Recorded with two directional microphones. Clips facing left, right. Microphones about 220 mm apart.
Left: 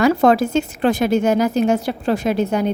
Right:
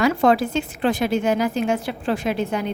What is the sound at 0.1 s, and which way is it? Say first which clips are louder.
A woman's voice: left 4 dB; 40° left (ahead or behind).